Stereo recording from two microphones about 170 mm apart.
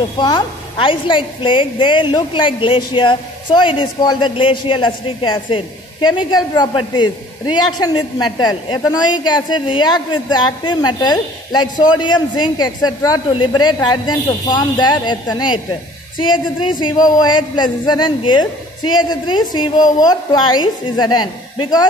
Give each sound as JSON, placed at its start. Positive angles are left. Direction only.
{"t": 0.2, "sound": "a woman's voice", "side_deg": 25}
{"t": 17.0, "sound": "a woman's voice", "side_deg": 25}